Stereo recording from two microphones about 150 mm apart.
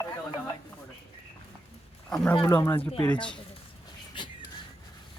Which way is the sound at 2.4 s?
15° left (ahead or behind).